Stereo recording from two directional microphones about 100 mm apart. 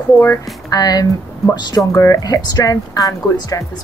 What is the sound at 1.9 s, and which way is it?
Speech, 35° left (ahead or behind).